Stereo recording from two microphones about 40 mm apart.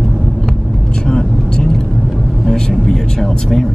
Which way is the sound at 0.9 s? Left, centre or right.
Centre.